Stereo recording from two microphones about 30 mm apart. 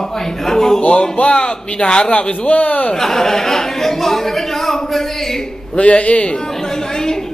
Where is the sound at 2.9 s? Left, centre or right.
Centre.